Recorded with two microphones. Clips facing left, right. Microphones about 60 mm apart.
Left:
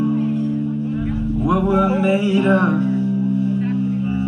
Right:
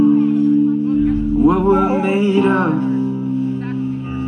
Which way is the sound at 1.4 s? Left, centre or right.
Right.